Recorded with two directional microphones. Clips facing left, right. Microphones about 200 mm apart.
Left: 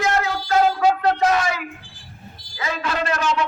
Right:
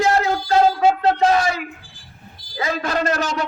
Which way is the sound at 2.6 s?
40° right (ahead or behind).